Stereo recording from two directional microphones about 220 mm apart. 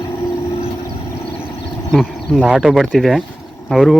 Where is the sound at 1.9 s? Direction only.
Centre (ahead or behind).